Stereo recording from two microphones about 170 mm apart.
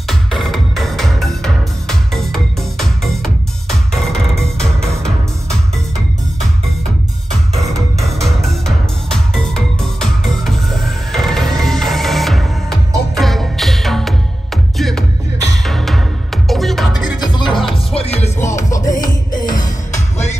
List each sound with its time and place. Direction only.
0.0 s music: centre (ahead or behind)
8.0 s music: centre (ahead or behind)
17.2 s music: 25° left (ahead or behind)
18.7 s music: 20° left (ahead or behind)
19.9 s music: 40° left (ahead or behind)